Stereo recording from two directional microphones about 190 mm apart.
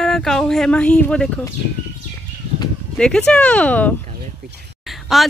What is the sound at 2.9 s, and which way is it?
Speech, 5° left (ahead or behind).